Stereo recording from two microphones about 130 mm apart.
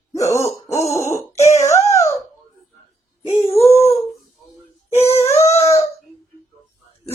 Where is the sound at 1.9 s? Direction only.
20° left (ahead or behind).